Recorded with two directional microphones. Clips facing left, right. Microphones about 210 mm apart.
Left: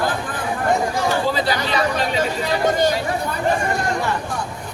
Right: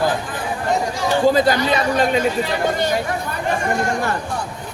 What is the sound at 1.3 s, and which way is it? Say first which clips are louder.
Speech: right 5 dB; 45° right (ahead or behind).